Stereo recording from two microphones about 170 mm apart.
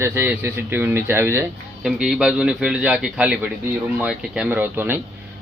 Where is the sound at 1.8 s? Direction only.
5° right (ahead or behind).